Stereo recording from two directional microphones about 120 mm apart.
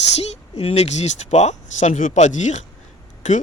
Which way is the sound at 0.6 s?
60° left (ahead or behind).